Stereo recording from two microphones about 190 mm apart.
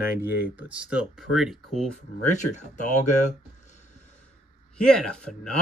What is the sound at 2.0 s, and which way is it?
Speech, 40° left (ahead or behind).